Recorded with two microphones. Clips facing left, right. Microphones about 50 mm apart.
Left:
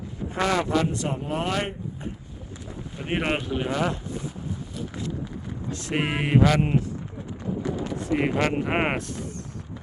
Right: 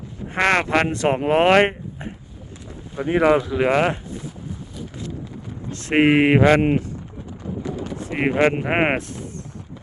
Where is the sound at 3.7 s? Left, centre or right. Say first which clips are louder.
Right 7 dB; right.